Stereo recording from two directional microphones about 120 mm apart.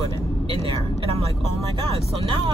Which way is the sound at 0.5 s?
50° right (ahead or behind).